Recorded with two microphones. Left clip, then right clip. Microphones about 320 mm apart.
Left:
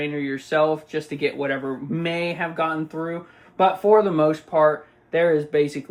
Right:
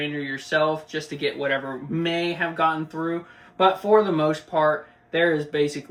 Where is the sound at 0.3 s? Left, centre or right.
Centre.